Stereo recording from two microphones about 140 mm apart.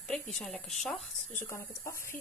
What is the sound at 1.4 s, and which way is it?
Speech, 20° left (ahead or behind).